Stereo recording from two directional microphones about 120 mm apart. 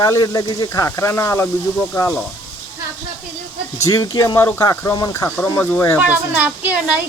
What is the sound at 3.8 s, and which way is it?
Speech, 25° left (ahead or behind).